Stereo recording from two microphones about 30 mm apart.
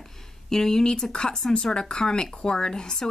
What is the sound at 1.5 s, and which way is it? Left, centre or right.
Speech, left.